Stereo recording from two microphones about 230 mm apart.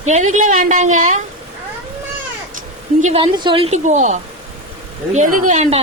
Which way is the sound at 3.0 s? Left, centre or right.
Right.